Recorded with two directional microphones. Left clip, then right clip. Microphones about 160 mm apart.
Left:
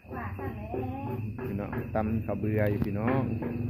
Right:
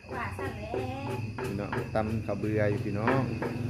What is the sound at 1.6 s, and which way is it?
Speech, 15° right (ahead or behind).